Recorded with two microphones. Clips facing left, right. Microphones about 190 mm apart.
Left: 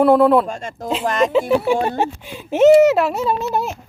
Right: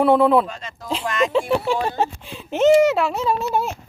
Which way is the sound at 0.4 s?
45° left (ahead or behind).